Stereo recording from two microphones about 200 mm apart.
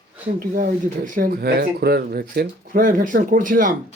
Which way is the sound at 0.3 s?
45° right (ahead or behind).